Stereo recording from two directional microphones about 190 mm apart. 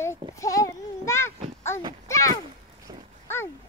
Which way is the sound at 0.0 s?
15° left (ahead or behind).